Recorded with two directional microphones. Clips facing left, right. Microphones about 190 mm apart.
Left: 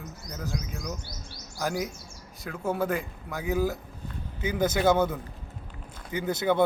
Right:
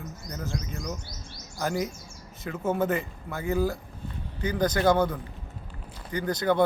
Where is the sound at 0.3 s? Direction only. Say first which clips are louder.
Even; 5° left (ahead or behind).